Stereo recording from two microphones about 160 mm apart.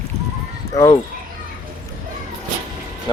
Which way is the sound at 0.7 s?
20° left (ahead or behind).